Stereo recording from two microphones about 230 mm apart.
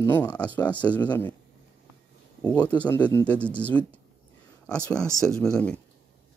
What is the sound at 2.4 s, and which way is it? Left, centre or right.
Speech, centre.